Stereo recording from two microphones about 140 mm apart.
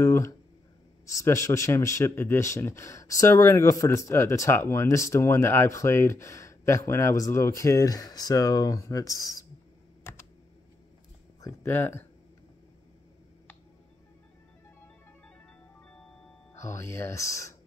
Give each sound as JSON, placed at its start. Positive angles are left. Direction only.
{"t": 0.0, "sound": "speech", "side_deg": 20}
{"t": 10.1, "sound": "computer keyboard", "side_deg": 15}
{"t": 11.4, "sound": "speech", "side_deg": 15}
{"t": 16.5, "sound": "speech", "side_deg": 20}